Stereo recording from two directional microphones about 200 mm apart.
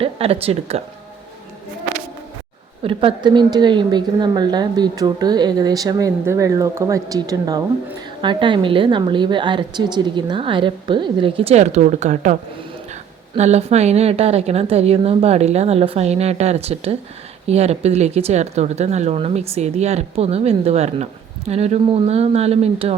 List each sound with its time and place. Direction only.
0.0 s speech: 30° right (ahead or behind)
2.8 s a woman's voice: 25° right (ahead or behind)